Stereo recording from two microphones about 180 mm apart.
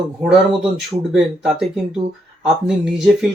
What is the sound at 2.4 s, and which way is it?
Speech, centre (ahead or behind).